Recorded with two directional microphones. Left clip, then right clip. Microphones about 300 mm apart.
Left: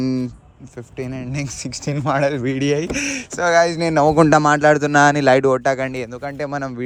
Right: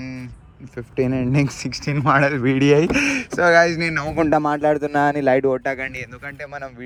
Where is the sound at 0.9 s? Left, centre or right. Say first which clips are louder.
Right 8 dB; centre.